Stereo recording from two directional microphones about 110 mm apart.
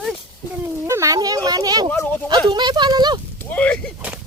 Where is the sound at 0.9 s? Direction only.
30° right (ahead or behind).